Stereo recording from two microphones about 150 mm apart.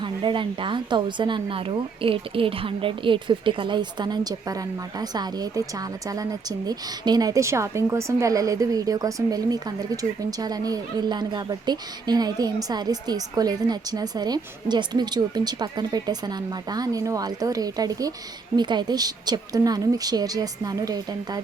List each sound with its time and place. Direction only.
0.0 s a woman's voice: 35° right (ahead or behind)